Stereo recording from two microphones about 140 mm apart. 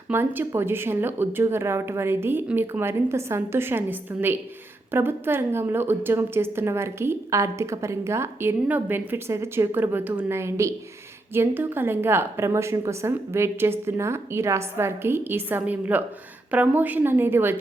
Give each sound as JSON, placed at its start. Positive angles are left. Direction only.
{"t": 0.1, "sound": "a woman's voice", "side_deg": -15}